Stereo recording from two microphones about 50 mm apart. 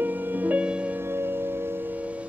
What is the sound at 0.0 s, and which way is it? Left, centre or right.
Music, right.